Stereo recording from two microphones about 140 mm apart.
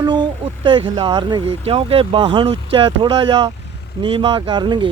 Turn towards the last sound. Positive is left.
turn(degrees=-30)  # may be behind; listen again after turning